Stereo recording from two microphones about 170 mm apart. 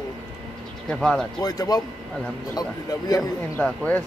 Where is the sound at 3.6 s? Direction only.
10° left (ahead or behind).